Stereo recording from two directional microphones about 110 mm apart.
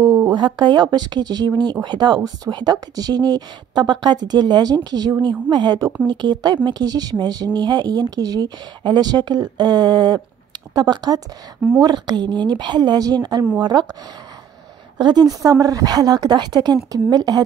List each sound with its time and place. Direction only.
0.0 s a sound: 25° right (ahead or behind)
0.6 s a woman's voice: 40° right (ahead or behind)
15.0 s a woman's voice: 40° right (ahead or behind)